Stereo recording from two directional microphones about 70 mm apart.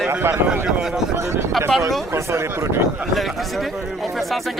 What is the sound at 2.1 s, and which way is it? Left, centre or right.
Speech, right.